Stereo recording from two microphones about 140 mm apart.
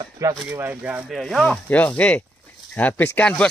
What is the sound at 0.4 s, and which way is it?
Speech, 15° right (ahead or behind).